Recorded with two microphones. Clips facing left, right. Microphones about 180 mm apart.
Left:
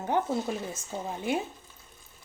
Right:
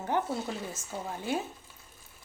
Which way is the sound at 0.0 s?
20° left (ahead or behind).